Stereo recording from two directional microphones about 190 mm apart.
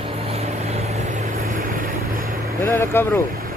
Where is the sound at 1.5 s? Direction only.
45° right (ahead or behind).